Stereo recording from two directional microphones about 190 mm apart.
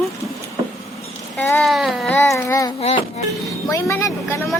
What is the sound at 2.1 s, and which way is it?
Speech, 15° left (ahead or behind).